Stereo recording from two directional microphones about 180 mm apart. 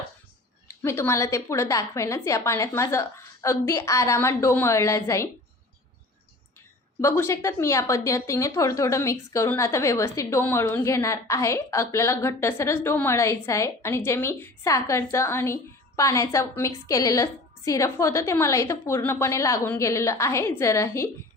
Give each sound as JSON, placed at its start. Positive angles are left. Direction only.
{"t": 0.7, "sound": "a woman's voice", "side_deg": 15}
{"t": 7.0, "sound": "a woman's voice", "side_deg": 15}